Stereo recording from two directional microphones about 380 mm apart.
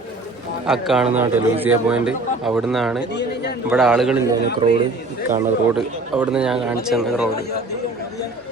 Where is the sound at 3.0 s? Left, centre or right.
Left.